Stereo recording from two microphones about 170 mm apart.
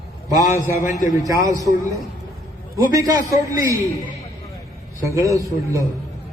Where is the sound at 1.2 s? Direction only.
20° right (ahead or behind).